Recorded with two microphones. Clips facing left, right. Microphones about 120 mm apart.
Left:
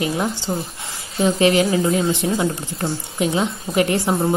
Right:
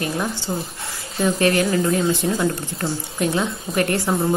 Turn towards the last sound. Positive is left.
turn(degrees=15)  # may be behind; listen again after turning